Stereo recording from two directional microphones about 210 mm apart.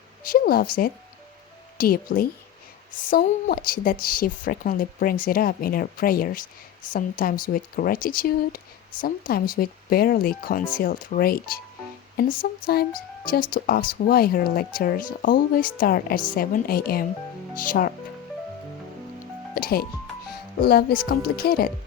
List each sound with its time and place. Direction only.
0.3 s speech: 45° left (ahead or behind)
19.5 s speech: 45° left (ahead or behind)